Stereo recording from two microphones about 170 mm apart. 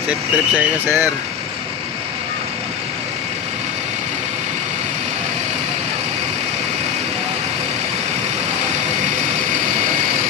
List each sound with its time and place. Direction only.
0.1 s speech: 10° right (ahead or behind)